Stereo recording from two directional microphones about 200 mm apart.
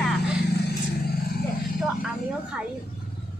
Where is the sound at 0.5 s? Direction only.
50° left (ahead or behind).